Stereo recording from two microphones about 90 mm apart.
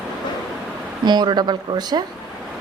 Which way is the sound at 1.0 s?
55° right (ahead or behind).